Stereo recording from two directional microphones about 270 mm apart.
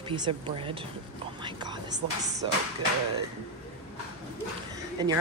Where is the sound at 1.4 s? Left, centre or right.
Centre.